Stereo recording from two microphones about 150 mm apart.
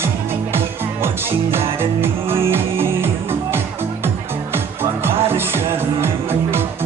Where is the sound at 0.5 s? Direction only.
15° right (ahead or behind).